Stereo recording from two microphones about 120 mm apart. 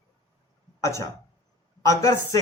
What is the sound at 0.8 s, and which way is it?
Speech, 25° left (ahead or behind).